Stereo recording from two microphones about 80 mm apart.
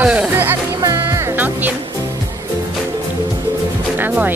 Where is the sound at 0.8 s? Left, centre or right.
Right.